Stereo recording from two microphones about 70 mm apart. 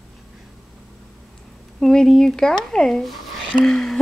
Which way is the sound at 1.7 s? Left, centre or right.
Centre.